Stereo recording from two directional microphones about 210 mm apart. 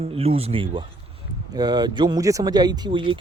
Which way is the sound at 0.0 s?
30° right (ahead or behind).